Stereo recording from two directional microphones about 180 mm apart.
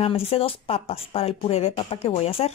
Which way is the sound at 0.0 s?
30° left (ahead or behind).